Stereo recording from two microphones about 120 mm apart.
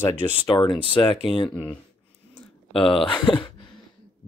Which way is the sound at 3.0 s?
45° left (ahead or behind).